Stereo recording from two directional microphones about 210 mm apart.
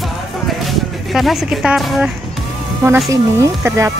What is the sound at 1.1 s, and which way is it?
Speech, centre (ahead or behind).